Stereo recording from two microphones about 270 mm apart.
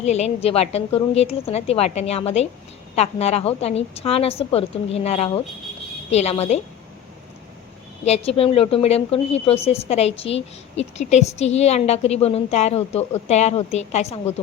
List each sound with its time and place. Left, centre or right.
0.0 s a woman's voice: left
8.0 s a woman's voice: left